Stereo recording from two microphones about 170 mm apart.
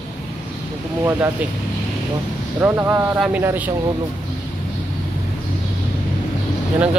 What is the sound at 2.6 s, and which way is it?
Speech, 5° right (ahead or behind).